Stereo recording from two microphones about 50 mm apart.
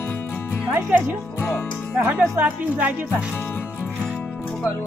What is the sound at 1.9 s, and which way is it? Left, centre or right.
Speech, right.